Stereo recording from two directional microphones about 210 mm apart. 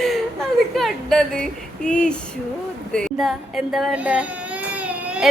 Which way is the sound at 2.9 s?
5° left (ahead or behind).